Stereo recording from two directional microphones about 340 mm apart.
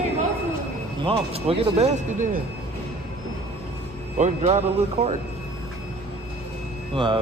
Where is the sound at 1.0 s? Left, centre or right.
Centre.